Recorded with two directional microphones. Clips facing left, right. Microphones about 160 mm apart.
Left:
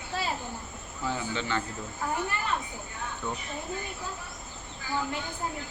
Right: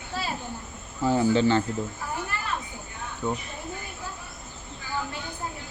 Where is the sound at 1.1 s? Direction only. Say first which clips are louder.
Right 11 dB; 35° right (ahead or behind).